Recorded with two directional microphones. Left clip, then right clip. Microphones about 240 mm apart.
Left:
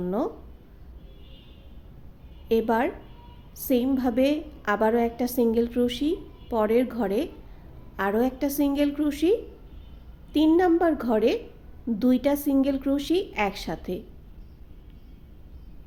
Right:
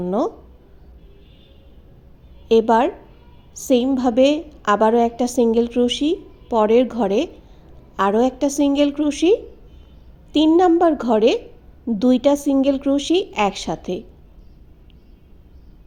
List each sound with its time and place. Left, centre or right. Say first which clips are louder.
0.0 s speech: right 7 dB; centre
2.5 s a woman's voice: right 9 dB; centre